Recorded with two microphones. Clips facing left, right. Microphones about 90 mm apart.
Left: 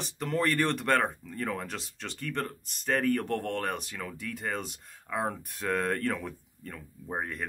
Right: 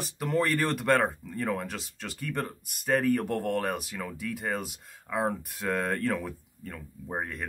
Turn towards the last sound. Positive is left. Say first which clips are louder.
# even
turn(degrees=0)  # may be behind; listen again after turning